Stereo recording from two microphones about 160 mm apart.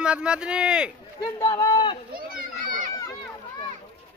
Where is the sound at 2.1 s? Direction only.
65° right (ahead or behind).